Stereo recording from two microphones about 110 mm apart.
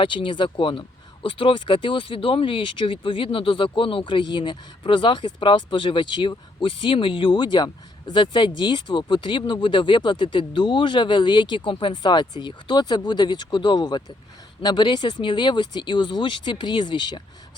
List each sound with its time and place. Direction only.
0.0 s speech: 50° left (ahead or behind)